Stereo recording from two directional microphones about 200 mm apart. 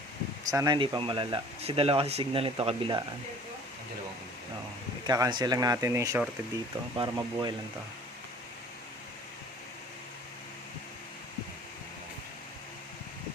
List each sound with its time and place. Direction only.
0.5 s speech: 20° right (ahead or behind)
5.0 s speech: 20° right (ahead or behind)